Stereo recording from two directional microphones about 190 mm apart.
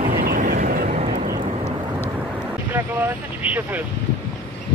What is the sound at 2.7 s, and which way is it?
Speech, 10° right (ahead or behind).